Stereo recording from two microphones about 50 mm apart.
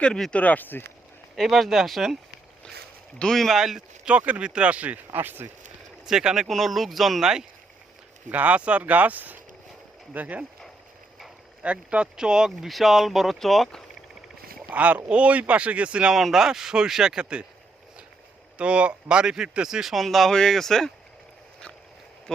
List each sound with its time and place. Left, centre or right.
0.3 s speech: left
1.4 s speech: centre
3.3 s speech: centre
3.6 s speech: centre
4.0 s speech: right
6.1 s speech: centre
6.5 s speech: centre
8.3 s speech: right
11.6 s speech: right
12.1 s speech: centre
12.6 s speech: centre
14.7 s speech: right
16.1 s speech: centre
18.5 s speech: right; by 20.9 s centre